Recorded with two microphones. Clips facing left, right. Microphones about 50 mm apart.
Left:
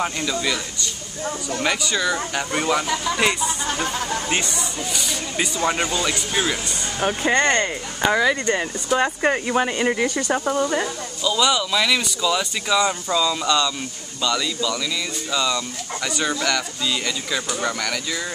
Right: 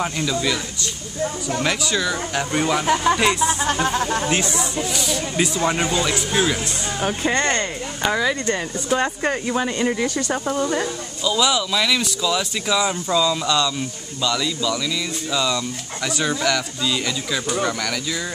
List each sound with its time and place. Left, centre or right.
0.0 s speech: centre
2.9 s speech: right
3.2 s speech: centre
4.9 s speech: centre